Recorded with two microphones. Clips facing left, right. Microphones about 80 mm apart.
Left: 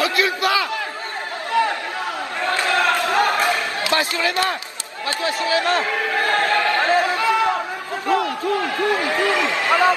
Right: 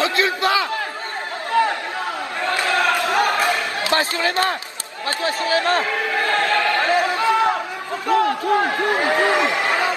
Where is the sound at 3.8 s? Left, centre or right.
Right.